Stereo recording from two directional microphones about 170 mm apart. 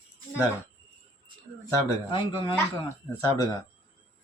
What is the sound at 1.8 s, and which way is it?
Speech, 30° left (ahead or behind).